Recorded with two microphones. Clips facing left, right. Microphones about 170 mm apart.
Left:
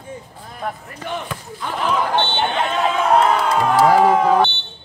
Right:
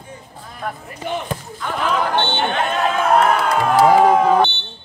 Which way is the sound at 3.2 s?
25° left (ahead or behind).